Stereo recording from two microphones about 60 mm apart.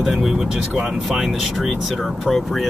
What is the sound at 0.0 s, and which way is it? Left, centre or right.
Speech, centre.